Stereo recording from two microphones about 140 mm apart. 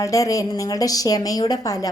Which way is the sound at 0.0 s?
25° left (ahead or behind).